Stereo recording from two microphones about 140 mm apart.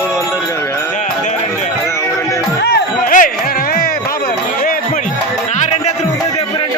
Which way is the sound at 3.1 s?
75° left (ahead or behind).